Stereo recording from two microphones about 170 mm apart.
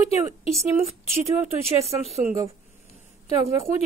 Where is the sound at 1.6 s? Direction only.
35° right (ahead or behind).